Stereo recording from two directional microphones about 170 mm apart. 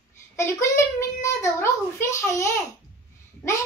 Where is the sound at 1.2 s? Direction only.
15° left (ahead or behind).